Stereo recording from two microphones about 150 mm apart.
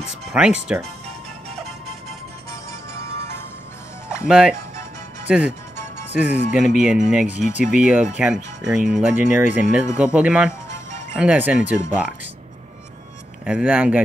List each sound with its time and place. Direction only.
0.3 s speech: 5° right (ahead or behind)
1.5 s music: 45° right (ahead or behind)
2.9 s music: 20° left (ahead or behind)
4.1 s speech: 5° right (ahead or behind)
13.5 s speech: 5° right (ahead or behind)